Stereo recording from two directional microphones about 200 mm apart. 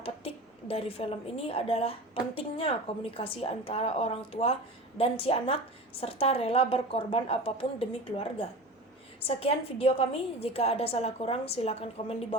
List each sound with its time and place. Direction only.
0.0 s a woman's voice: 30° left (ahead or behind)